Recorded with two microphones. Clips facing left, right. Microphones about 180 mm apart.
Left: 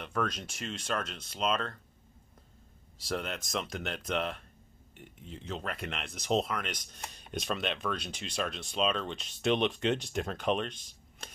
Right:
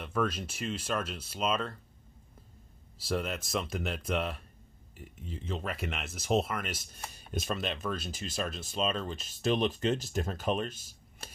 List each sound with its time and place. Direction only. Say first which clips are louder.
0.0 s speech: right 2 dB; 5° right (ahead or behind)
3.0 s speech: right 2 dB; centre (ahead or behind)